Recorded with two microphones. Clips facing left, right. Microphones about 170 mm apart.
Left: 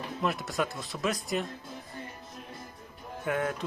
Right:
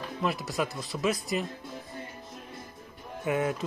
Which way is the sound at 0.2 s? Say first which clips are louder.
Right 1 dB; centre (ahead or behind).